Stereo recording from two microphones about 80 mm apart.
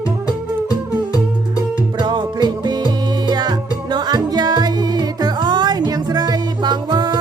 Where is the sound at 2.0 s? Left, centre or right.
Right.